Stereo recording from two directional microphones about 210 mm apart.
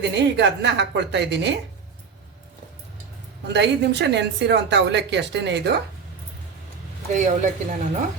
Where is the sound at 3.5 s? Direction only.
55° right (ahead or behind).